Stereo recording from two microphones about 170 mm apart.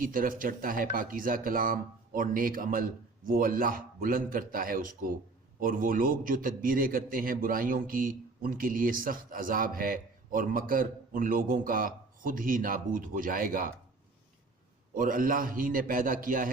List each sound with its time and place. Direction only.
0.0 s a man's voice: 55° right (ahead or behind)
14.9 s a man's voice: 55° right (ahead or behind)